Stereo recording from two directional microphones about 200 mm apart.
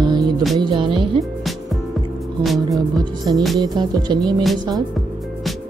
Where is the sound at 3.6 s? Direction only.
20° right (ahead or behind).